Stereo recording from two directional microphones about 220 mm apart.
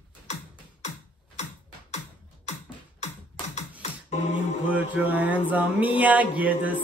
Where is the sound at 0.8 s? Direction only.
30° left (ahead or behind).